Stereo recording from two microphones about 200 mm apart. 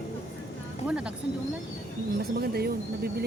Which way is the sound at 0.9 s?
5° right (ahead or behind).